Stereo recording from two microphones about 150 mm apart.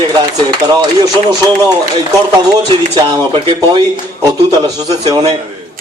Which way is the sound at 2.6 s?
30° right (ahead or behind).